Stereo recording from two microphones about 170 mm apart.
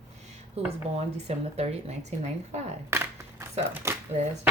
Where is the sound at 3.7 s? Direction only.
15° right (ahead or behind).